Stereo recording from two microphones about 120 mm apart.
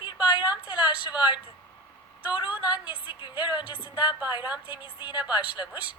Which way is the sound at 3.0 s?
45° left (ahead or behind).